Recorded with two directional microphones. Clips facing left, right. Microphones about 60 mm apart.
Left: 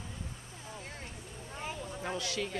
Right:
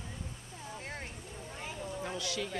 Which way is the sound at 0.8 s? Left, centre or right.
Right.